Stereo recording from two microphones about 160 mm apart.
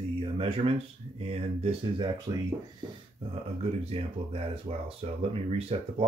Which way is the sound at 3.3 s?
40° right (ahead or behind).